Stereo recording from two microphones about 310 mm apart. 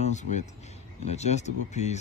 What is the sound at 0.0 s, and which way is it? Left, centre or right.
Speech, left.